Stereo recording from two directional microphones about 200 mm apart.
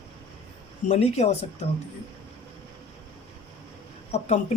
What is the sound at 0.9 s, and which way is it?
Speech, 30° left (ahead or behind).